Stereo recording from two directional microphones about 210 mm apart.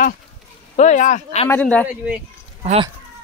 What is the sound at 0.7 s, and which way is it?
Speech, 35° left (ahead or behind).